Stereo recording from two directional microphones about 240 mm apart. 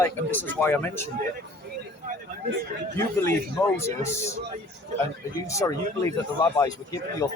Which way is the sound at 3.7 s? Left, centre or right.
Centre.